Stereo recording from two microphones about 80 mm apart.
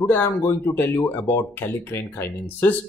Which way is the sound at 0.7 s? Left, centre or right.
Left.